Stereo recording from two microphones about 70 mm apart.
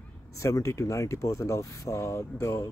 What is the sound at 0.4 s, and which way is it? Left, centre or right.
Speech, left.